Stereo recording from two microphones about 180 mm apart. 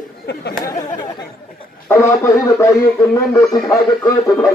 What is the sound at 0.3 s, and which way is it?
Speech, 65° left (ahead or behind).